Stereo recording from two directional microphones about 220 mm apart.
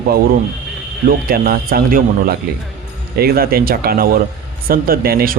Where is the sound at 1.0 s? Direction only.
40° right (ahead or behind).